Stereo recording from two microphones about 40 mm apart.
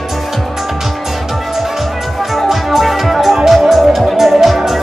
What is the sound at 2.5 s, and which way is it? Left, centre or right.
Music, centre.